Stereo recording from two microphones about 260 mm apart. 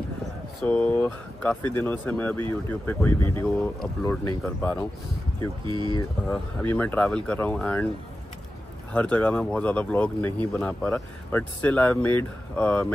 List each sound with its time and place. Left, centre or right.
0.6 s speech: centre
5.7 s speech: centre
6.2 s speech: centre
8.9 s speech: centre